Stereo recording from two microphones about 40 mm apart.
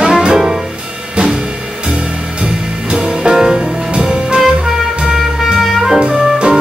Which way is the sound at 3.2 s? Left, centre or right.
Centre.